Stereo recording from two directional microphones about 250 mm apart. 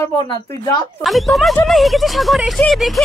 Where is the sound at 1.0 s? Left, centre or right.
Centre.